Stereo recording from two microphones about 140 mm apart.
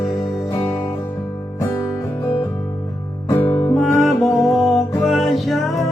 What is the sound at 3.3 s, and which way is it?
Music, 15° left (ahead or behind).